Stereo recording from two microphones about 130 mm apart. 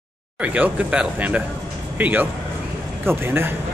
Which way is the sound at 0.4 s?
10° right (ahead or behind).